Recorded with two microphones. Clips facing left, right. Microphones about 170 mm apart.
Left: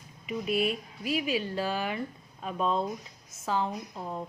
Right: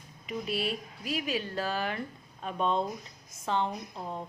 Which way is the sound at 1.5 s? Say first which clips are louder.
Left 1 dB; 10° left (ahead or behind).